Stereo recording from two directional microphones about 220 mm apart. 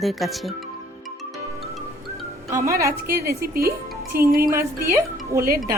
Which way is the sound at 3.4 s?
45° right (ahead or behind).